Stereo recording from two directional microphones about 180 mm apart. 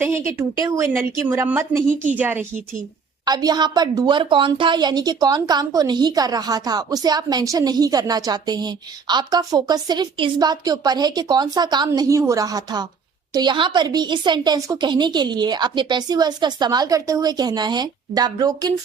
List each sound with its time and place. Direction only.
0.0 s a woman's voice: 15° right (ahead or behind)
3.2 s a woman's voice: 20° right (ahead or behind)